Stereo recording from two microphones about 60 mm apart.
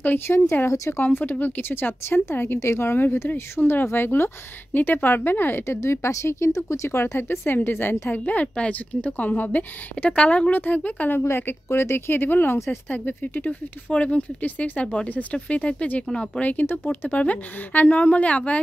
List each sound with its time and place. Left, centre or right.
0.3 s speech: left
0.7 s speech: left
1.1 s speech: left
10.5 s speech: left
16.7 s speech: left